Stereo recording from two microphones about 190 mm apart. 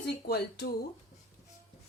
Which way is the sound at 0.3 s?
60° left (ahead or behind).